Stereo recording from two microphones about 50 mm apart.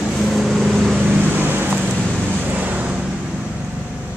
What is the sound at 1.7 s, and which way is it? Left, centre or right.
Vehicle, centre.